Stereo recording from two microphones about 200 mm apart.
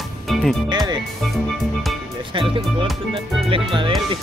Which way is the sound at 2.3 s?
25° right (ahead or behind).